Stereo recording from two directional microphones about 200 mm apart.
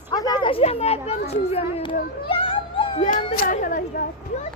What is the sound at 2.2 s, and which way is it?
Cat, 25° left (ahead or behind).